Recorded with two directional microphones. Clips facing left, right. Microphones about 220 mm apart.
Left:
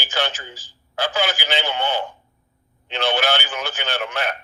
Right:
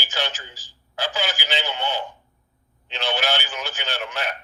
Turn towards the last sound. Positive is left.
turn(degrees=55)  # may be behind; listen again after turning